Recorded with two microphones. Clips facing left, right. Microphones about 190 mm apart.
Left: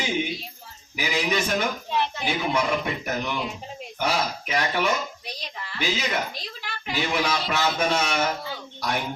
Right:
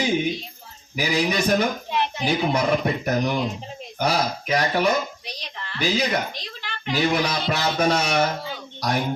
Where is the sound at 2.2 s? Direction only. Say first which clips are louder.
Right 6 dB; 40° right (ahead or behind).